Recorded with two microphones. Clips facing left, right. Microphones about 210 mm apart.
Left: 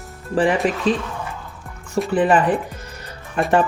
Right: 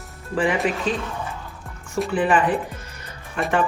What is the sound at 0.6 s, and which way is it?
Speech, 35° left (ahead or behind).